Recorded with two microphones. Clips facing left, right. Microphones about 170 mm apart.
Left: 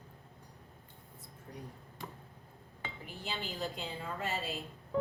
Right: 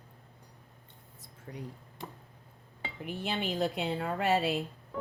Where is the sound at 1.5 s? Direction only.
90° right.